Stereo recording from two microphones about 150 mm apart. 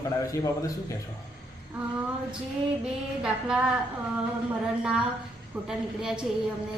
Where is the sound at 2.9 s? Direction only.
5° right (ahead or behind).